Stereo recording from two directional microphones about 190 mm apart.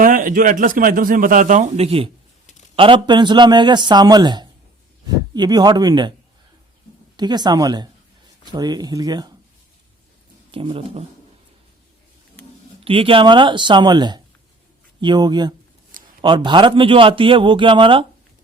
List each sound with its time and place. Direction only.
0.0 s a man's voice: 45° right (ahead or behind); by 6.1 s 25° right (ahead or behind)
7.2 s a man's voice: 20° right (ahead or behind)
10.5 s a man's voice: 30° right (ahead or behind)
12.8 s a man's voice: 30° right (ahead or behind)